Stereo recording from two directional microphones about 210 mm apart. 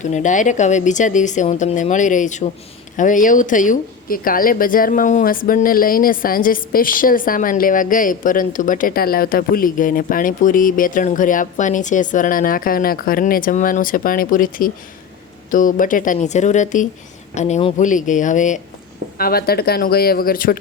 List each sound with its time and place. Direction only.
0.0 s speech: 35° left (ahead or behind)